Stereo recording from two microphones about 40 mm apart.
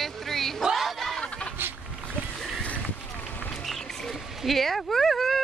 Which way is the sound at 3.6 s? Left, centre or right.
Centre.